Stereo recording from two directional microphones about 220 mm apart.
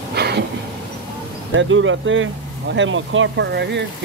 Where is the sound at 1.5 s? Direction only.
60° right (ahead or behind).